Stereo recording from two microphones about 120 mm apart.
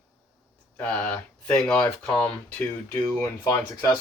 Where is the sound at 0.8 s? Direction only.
10° left (ahead or behind).